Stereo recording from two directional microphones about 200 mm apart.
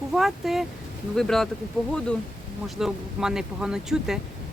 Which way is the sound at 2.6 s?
Centre (ahead or behind).